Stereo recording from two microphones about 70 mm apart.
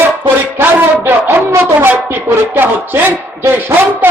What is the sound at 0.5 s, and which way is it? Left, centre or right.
A man's voice, right.